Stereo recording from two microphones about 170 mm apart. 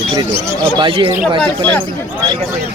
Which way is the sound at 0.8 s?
30° right (ahead or behind).